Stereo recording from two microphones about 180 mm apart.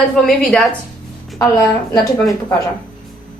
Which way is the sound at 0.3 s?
Centre (ahead or behind).